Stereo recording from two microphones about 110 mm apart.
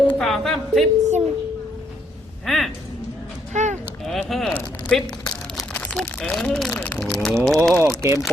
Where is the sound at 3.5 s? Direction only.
90° right.